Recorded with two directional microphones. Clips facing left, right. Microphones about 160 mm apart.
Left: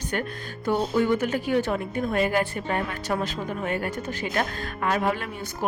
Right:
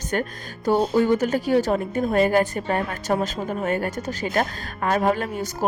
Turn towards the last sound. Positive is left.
turn(degrees=-40)  # may be behind; listen again after turning